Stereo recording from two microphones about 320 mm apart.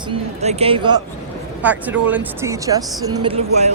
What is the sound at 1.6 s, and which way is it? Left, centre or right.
Speech, centre.